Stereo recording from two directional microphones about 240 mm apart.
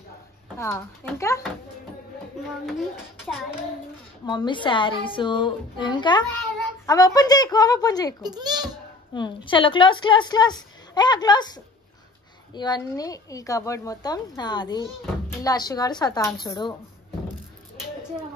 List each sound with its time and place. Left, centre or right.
0.6 s speech: centre
2.6 s a child's voice: centre
4.3 s a woman's voice: centre
8.2 s a child's voice: centre
9.1 s a woman's voice: centre